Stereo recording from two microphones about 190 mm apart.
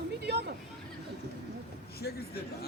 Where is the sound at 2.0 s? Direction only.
55° left (ahead or behind).